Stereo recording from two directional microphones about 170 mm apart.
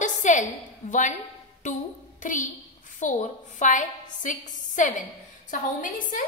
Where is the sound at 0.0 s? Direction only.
45° left (ahead or behind).